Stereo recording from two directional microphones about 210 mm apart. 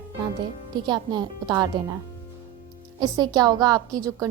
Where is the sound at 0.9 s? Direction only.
20° right (ahead or behind).